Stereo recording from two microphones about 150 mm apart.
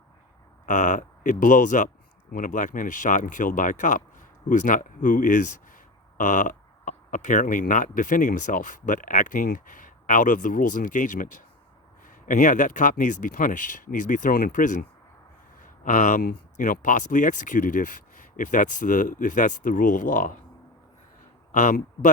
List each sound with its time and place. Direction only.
0.6 s speech: 55° left (ahead or behind)
21.5 s a man's voice: 55° left (ahead or behind)